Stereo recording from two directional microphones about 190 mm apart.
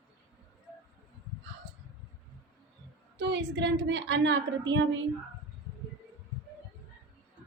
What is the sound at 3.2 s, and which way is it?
A woman's voice, 65° right (ahead or behind).